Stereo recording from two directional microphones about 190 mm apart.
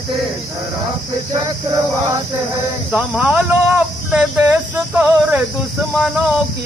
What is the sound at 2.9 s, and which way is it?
Speech, 5° right (ahead or behind).